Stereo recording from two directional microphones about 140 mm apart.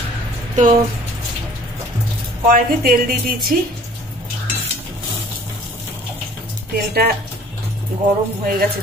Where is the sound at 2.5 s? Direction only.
90° right.